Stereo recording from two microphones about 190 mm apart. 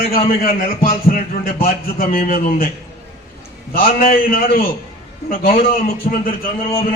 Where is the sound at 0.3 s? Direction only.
50° left (ahead or behind).